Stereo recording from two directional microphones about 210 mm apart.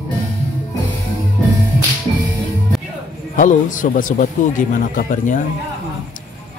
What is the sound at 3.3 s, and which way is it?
Speech, 40° left (ahead or behind).